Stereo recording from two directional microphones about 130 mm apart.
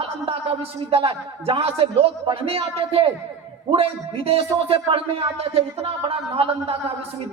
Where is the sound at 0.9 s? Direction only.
50° right (ahead or behind).